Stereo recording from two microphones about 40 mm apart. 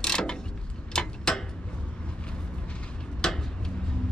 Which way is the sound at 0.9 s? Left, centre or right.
Centre.